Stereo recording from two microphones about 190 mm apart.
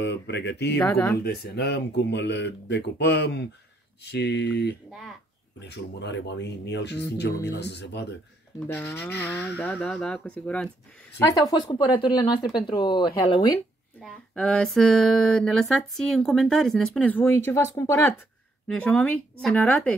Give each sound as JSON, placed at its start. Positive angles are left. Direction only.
{"t": 0.0, "sound": "speech", "side_deg": 65}
{"t": 0.7, "sound": "speech", "side_deg": 10}
{"t": 1.2, "sound": "speech", "side_deg": 55}
{"t": 8.7, "sound": "speech", "side_deg": 10}
{"t": 11.1, "sound": "speech", "side_deg": 20}
{"t": 13.9, "sound": "a sound", "side_deg": 5}
{"t": 18.7, "sound": "speech", "side_deg": 5}
{"t": 19.4, "sound": "a sound", "side_deg": 5}